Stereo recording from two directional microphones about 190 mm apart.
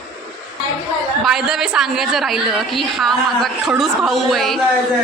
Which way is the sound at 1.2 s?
Centre (ahead or behind).